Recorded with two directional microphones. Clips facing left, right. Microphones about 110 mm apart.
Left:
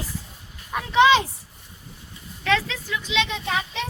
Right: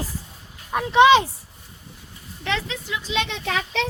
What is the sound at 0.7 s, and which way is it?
Speech, 25° right (ahead or behind).